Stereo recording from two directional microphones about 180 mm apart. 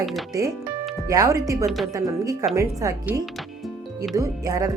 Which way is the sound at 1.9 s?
20° right (ahead or behind).